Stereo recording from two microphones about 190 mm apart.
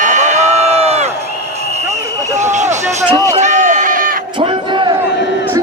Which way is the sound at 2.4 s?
40° right (ahead or behind).